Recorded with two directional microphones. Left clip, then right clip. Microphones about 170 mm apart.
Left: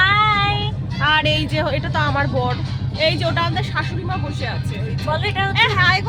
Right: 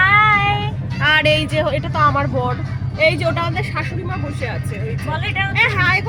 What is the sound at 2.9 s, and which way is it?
Speech, 5° right (ahead or behind).